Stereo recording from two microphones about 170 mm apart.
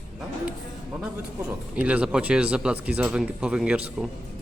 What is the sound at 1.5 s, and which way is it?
Speech, 10° right (ahead or behind).